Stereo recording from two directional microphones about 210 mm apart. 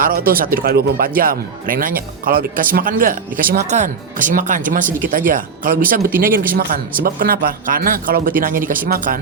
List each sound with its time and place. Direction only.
0.0 s speech: 45° right (ahead or behind)